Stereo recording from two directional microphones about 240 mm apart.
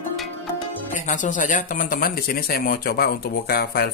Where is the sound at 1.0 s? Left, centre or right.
Left.